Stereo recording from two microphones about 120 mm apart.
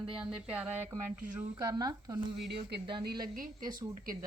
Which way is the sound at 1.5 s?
30° right (ahead or behind).